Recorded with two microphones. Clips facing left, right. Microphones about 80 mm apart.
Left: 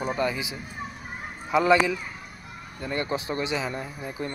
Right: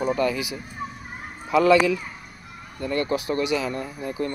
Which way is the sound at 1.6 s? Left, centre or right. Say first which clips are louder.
Right 3 dB; centre.